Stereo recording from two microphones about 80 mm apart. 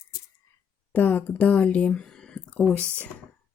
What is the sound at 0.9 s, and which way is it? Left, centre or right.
Speech, left.